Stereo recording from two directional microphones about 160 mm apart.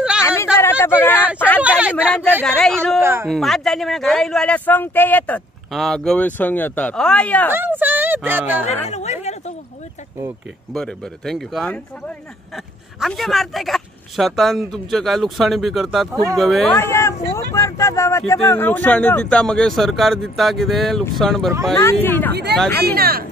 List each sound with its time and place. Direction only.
0.2 s a sound: 15° left (ahead or behind)
1.6 s a sound: 10° right (ahead or behind)
2.4 s speech: 5° left (ahead or behind)
3.0 s speech: 15° right (ahead or behind)
3.3 s speech: centre (ahead or behind)
7.5 s speech: 10° right (ahead or behind)
8.8 s speech: 45° left (ahead or behind)
10.7 s speech: centre (ahead or behind)
13.0 s speech: centre (ahead or behind)
16.7 s speech: 15° left (ahead or behind)
21.8 s speech: 15° left (ahead or behind)
22.3 s speech: 90° right
22.8 s speech: 70° right (ahead or behind)